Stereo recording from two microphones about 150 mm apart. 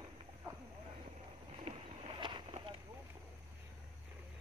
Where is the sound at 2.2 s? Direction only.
35° right (ahead or behind).